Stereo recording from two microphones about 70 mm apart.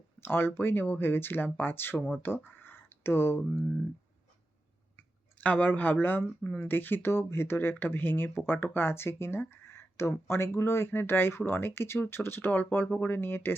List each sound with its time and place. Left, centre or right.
0.2 s speech: left
5.4 s speech: left